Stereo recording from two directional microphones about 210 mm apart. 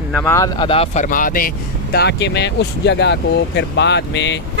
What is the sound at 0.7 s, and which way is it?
Speech, 30° left (ahead or behind).